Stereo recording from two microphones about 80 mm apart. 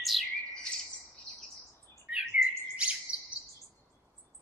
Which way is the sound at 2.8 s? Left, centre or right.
Centre.